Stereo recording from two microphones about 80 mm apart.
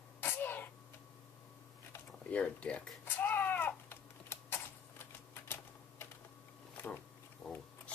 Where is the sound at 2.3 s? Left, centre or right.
Centre.